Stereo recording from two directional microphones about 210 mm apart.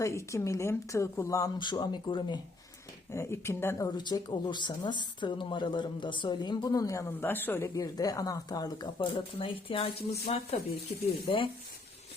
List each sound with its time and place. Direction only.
0.0 s speech: 15° left (ahead or behind)